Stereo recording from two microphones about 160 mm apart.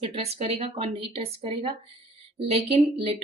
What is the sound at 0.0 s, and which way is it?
A woman's voice, 40° right (ahead or behind).